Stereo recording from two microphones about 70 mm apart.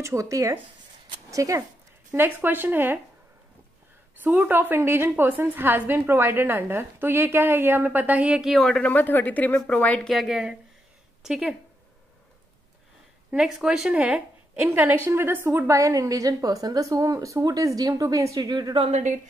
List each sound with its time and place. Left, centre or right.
0.0 s speech: right
2.1 s a woman's voice: right
4.2 s a woman's voice: right
8.4 s a woman's voice: centre
8.6 s a woman's voice: centre
8.9 s speech: left
9.9 s a woman's voice: centre
13.3 s a woman's voice: centre
14.7 s a woman's voice: right